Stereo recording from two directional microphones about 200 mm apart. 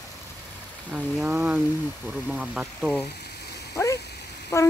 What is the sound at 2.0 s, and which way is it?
Speech, 5° right (ahead or behind).